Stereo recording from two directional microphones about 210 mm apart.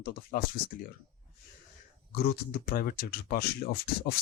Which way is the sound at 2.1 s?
45° left (ahead or behind).